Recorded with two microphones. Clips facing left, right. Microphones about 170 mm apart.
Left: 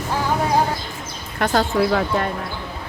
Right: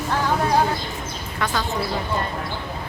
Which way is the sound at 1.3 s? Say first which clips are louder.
Left 6 dB; 55° left (ahead or behind).